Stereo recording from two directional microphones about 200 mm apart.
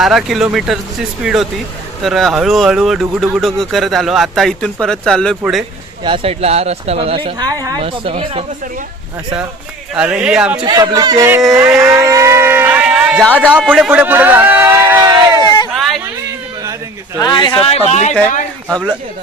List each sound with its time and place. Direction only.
0.0 s speech: centre (ahead or behind)
6.0 s speech: 25° right (ahead or behind)
9.9 s speech: 5° right (ahead or behind)
10.6 s speech: 20° right (ahead or behind)
15.4 s a sound: 20° left (ahead or behind)
15.7 s a sound: centre (ahead or behind)
17.2 s speech: 20° left (ahead or behind)